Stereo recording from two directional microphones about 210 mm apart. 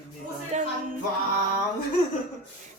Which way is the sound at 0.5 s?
35° right (ahead or behind).